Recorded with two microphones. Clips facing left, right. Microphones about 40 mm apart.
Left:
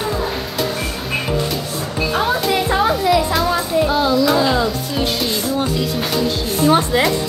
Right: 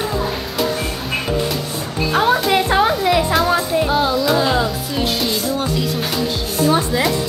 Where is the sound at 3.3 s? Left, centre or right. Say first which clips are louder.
Right 1 dB; centre.